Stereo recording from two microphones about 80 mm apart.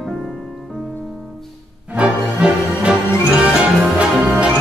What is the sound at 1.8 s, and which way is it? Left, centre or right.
Music, centre.